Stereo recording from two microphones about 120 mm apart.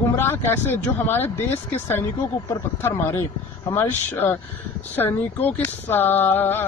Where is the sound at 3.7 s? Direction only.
20° left (ahead or behind).